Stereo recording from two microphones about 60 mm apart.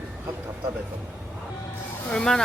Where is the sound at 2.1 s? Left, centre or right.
Centre.